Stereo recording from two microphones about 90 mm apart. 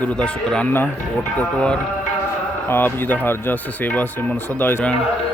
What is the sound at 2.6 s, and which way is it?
Speech, 25° left (ahead or behind).